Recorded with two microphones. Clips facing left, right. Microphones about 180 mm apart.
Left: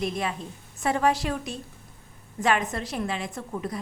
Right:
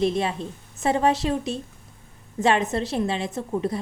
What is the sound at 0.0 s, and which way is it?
A woman's voice, 30° right (ahead or behind).